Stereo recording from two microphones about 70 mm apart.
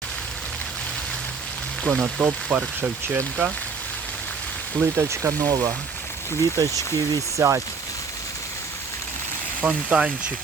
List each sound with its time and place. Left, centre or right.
1.9 s speech: centre
4.9 s speech: right
5.5 s speech: right
9.6 s speech: centre